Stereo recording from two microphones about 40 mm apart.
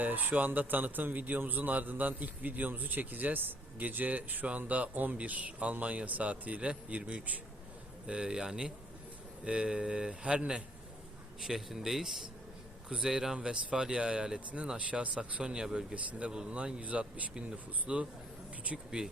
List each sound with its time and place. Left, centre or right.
0.0 s a man's voice: right
11.3 s speech: centre
12.9 s speech: centre
14.8 s speech: right; by 16.0 s centre
16.1 s speech: right
17.8 s speech: right